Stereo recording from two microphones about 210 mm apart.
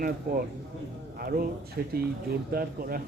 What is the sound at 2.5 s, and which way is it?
Speech, 45° right (ahead or behind).